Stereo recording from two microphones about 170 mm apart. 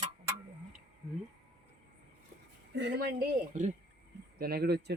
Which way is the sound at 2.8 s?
80° right.